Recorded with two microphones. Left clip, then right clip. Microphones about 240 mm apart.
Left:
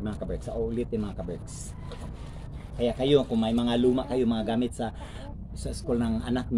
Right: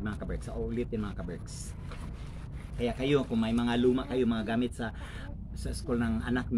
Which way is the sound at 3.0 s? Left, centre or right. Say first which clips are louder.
Left 6 dB; left.